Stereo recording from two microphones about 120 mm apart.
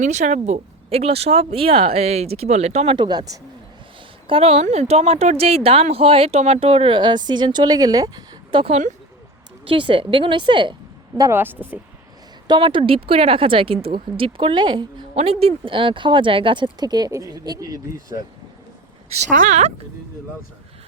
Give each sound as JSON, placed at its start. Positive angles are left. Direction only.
{"t": 0.0, "sound": "speech", "side_deg": -80}
{"t": 2.9, "sound": "speech", "side_deg": -40}
{"t": 4.3, "sound": "speech", "side_deg": -55}
{"t": 8.5, "sound": "speech", "side_deg": -50}
{"t": 11.2, "sound": "speech", "side_deg": -20}
{"t": 12.5, "sound": "speech", "side_deg": -45}
{"t": 15.1, "sound": "speech", "side_deg": -55}
{"t": 19.3, "sound": "speech", "side_deg": -90}